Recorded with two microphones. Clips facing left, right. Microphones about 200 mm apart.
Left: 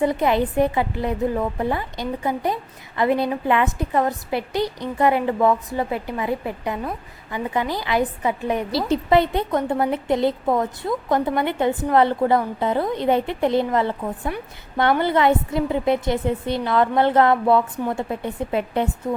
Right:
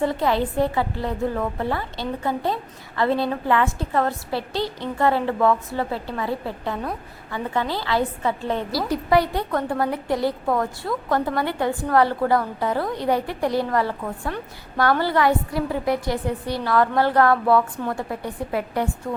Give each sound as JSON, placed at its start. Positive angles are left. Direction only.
{"t": 0.0, "sound": "a woman's voice", "side_deg": 20}